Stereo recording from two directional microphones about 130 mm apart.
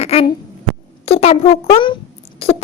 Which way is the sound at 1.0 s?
50° left (ahead or behind).